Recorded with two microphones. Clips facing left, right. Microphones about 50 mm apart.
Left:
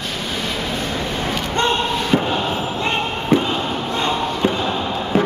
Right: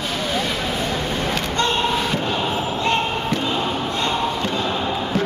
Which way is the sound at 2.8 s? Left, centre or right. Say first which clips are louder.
Right 1 dB; centre.